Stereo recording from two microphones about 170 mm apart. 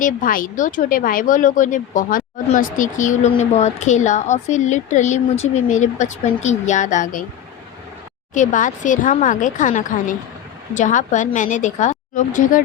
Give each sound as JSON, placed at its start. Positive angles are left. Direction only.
{"t": 0.0, "sound": "speech", "side_deg": 55}
{"t": 8.3, "sound": "speech", "side_deg": 50}